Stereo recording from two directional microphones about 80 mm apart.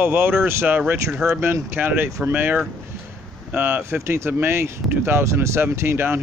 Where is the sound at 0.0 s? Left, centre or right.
Right.